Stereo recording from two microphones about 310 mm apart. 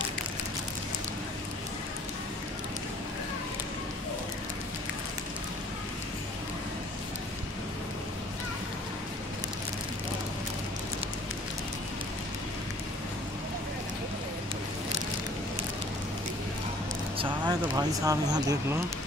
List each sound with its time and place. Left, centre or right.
17.2 s speech: centre